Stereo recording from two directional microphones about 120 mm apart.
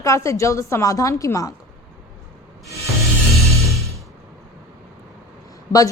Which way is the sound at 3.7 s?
25° right (ahead or behind).